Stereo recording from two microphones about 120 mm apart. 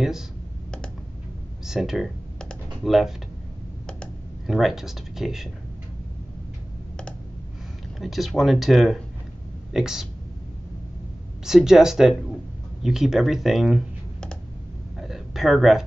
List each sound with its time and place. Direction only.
1.7 s computer keyboard: 5° right (ahead or behind)
8.0 s speech: centre (ahead or behind)
11.4 s speech: 5° right (ahead or behind)
15.0 s a sound: centre (ahead or behind)